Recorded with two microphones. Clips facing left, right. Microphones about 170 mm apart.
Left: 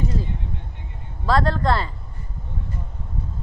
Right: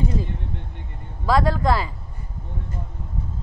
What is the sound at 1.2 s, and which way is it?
Speech, 10° right (ahead or behind).